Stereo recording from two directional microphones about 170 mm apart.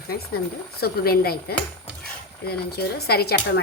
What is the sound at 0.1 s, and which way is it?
Speech, 65° left (ahead or behind).